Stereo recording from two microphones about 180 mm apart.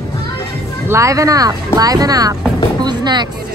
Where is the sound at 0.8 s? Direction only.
15° right (ahead or behind).